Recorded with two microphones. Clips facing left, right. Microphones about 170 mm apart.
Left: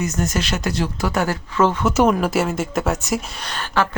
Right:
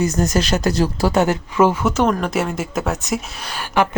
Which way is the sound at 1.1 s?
20° right (ahead or behind).